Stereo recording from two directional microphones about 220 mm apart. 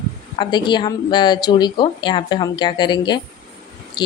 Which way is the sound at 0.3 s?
20° left (ahead or behind).